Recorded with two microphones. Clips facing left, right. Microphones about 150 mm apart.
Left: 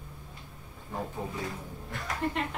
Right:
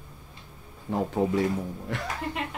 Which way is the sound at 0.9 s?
90° right.